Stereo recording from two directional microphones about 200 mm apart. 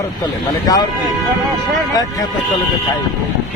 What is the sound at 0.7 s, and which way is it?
Speech, 20° left (ahead or behind).